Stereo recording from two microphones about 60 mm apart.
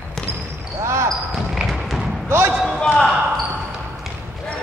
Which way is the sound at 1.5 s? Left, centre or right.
Centre.